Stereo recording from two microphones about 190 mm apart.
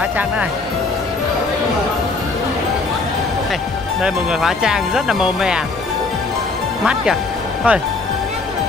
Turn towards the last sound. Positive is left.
turn(degrees=-5)  # may be behind; listen again after turning